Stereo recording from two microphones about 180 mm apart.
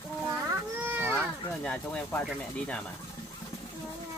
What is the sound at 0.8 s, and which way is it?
Baby cry, 10° right (ahead or behind).